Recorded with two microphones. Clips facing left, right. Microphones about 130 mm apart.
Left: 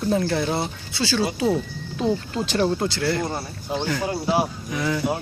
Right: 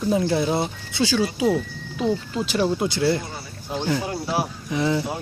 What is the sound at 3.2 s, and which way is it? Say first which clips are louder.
Speech: left 7 dB; 50° left (ahead or behind).